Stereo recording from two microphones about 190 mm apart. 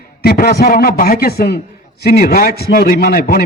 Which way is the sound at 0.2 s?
50° left (ahead or behind).